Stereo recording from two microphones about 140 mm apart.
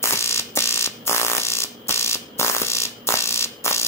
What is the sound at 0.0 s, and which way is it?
Fire alarm, 20° left (ahead or behind).